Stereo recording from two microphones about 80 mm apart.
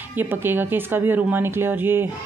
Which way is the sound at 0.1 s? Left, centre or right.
Right.